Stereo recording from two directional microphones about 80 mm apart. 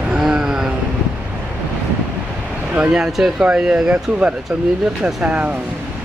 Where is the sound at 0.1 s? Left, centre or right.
Centre.